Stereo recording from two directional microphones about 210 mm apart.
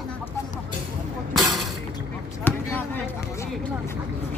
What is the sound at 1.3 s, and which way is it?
Shatter, centre (ahead or behind).